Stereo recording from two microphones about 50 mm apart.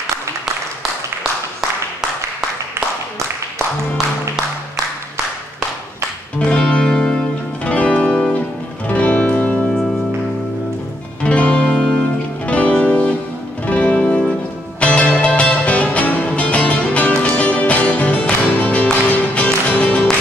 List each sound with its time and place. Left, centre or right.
6.4 s music: centre
11.2 s music: left
12.4 s music: left